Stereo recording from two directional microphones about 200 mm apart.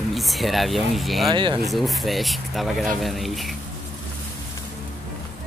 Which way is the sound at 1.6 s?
Centre (ahead or behind).